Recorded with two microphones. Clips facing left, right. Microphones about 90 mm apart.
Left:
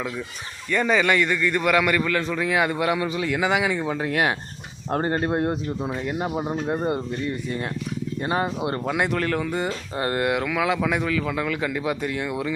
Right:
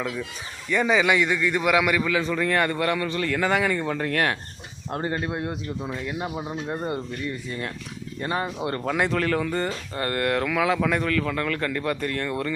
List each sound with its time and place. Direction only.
0.7 s a man's voice: 5° right (ahead or behind); by 4.4 s 15° left (ahead or behind)
4.9 s speech: 40° left (ahead or behind)
5.8 s speech: 25° left (ahead or behind)
8.8 s a man's voice: 5° left (ahead or behind)
9.9 s speech: 20° left (ahead or behind)
10.4 s a man's voice: centre (ahead or behind)